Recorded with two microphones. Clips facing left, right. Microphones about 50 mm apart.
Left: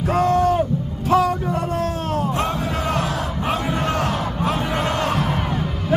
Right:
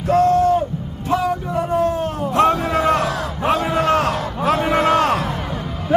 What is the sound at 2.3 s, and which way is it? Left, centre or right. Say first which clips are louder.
Music: right 7 dB; right.